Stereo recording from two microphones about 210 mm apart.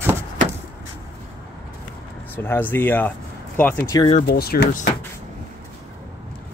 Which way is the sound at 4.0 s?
30° left (ahead or behind).